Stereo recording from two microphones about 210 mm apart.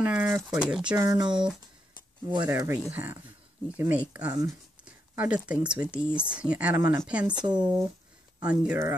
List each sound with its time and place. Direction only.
0.0 s speech: 5° right (ahead or behind)
0.9 s speech: 20° right (ahead or behind)